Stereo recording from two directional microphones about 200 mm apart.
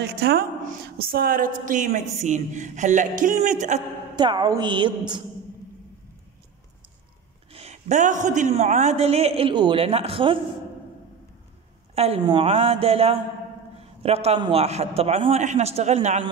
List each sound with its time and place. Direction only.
0.0 s a woman's voice: 50° right (ahead or behind)
4.1 s a woman's voice: 20° right (ahead or behind)
7.5 s a woman's voice: 35° right (ahead or behind)
11.9 s a woman's voice: 30° right (ahead or behind)